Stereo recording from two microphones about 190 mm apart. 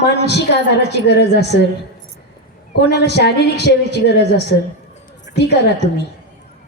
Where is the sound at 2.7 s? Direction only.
60° left (ahead or behind).